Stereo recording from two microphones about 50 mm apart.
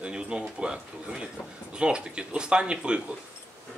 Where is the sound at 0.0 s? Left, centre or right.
Centre.